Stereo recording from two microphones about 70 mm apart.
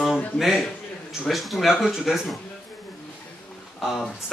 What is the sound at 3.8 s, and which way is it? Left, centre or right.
Speech, centre.